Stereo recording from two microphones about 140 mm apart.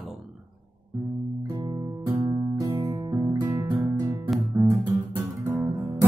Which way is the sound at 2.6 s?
25° right (ahead or behind).